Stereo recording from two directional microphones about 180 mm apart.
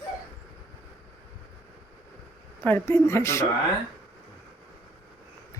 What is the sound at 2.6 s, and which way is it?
Speech, 10° left (ahead or behind).